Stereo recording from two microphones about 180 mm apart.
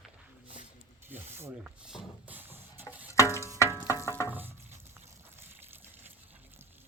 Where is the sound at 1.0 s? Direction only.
10° right (ahead or behind).